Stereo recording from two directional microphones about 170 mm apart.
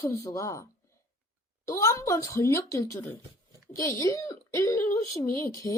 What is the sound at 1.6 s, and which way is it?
Speech, 15° left (ahead or behind).